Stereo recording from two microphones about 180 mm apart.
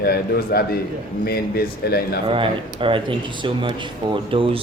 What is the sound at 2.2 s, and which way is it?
Speech, 30° right (ahead or behind).